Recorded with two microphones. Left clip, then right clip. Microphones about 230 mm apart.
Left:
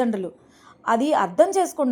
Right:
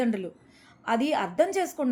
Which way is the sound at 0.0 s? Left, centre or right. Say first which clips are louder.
Left 5 dB; centre.